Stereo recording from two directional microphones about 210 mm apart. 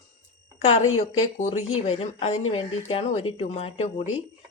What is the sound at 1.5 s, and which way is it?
Speech, 85° left.